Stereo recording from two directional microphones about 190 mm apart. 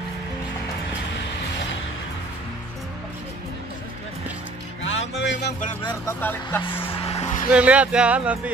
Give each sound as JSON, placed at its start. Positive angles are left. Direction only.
{"t": 4.8, "sound": "music", "side_deg": 70}
{"t": 5.9, "sound": "speech", "side_deg": 10}
{"t": 6.6, "sound": "vehicle", "side_deg": 30}
{"t": 7.5, "sound": "speech", "side_deg": -5}